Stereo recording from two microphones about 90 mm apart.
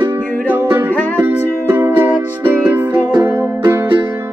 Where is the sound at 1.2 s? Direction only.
25° right (ahead or behind).